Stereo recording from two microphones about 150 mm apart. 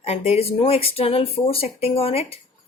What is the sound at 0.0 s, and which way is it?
Speech, 45° left (ahead or behind).